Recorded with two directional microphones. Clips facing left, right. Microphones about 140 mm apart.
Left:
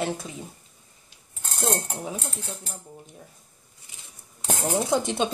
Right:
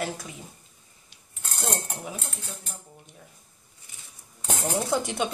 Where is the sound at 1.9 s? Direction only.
25° left (ahead or behind).